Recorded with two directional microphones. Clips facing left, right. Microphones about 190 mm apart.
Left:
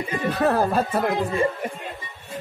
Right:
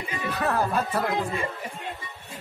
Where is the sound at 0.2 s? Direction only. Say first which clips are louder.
Left 5 dB; 40° left (ahead or behind).